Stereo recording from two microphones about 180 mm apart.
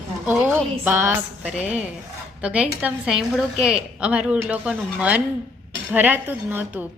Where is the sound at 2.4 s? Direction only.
5° right (ahead or behind).